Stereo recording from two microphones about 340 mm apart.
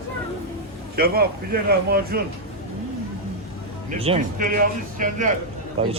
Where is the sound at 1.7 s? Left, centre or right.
Right.